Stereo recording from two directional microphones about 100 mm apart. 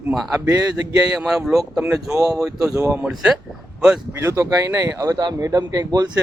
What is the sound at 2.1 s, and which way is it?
Speech, 35° right (ahead or behind).